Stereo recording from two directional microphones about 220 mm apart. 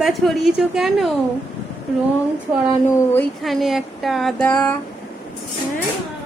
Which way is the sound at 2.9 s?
10° left (ahead or behind).